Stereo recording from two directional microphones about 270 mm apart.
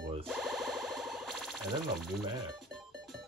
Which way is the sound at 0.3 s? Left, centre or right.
Centre.